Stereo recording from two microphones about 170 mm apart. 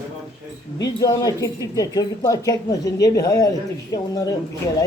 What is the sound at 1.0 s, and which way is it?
Speech, 20° left (ahead or behind).